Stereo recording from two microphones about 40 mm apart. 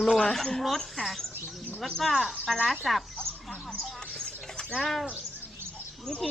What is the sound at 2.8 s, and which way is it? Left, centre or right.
Chicken, centre.